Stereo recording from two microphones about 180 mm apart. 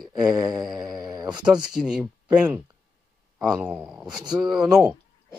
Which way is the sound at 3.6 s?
10° right (ahead or behind).